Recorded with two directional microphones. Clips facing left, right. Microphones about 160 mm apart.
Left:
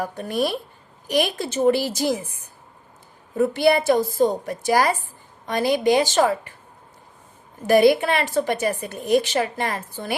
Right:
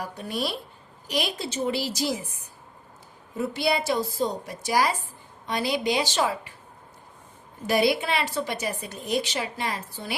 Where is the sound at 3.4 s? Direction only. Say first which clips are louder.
Left 8 dB; 50° left (ahead or behind).